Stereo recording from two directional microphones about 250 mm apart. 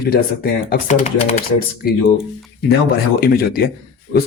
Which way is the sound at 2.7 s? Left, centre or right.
Left.